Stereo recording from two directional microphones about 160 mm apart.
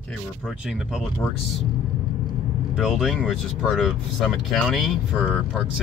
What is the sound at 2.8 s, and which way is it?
Speech, centre (ahead or behind).